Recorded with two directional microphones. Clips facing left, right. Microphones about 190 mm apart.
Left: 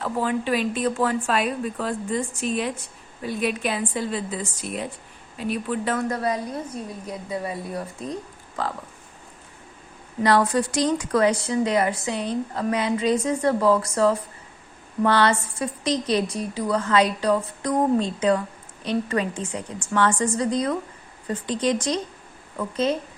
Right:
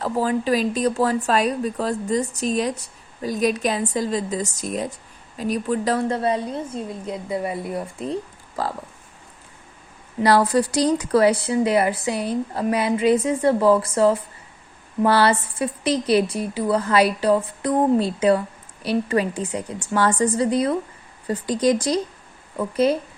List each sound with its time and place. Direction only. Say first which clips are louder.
0.0 s a woman's voice: right 3 dB; 40° right (ahead or behind)
10.2 s speech: right 2 dB; 35° right (ahead or behind)
12.1 s speech: right 2 dB; 10° right (ahead or behind)
12.5 s a woman's voice: right 3 dB; 30° right (ahead or behind)